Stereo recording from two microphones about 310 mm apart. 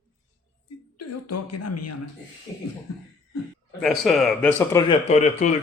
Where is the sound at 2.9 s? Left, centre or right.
Left.